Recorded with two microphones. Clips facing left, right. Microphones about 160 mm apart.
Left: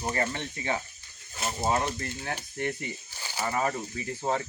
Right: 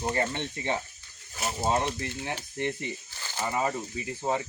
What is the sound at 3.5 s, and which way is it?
Speech, 15° right (ahead or behind).